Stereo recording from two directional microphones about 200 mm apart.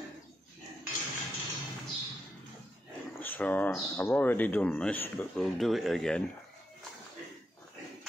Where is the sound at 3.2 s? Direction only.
10° left (ahead or behind).